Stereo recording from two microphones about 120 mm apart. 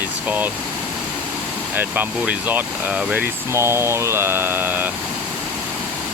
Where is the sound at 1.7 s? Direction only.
15° right (ahead or behind).